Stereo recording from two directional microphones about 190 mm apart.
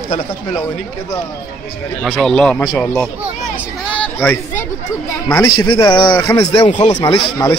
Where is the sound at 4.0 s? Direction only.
10° left (ahead or behind).